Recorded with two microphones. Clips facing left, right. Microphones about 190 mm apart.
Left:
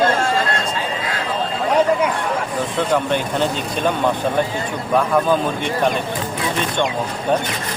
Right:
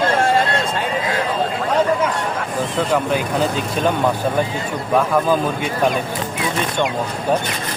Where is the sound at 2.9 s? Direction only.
Centre (ahead or behind).